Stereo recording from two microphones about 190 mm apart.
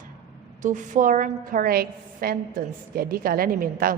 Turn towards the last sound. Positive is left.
turn(degrees=-50)  # may be behind; listen again after turning